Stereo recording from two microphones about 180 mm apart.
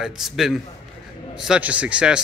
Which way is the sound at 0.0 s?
Centre (ahead or behind).